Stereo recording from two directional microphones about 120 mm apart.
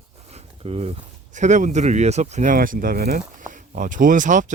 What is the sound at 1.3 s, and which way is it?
Speech, 90° right.